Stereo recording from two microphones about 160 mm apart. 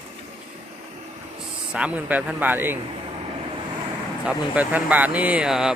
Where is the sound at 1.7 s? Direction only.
5° right (ahead or behind).